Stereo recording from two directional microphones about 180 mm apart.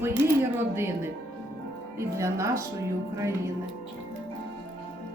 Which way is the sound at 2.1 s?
15° right (ahead or behind).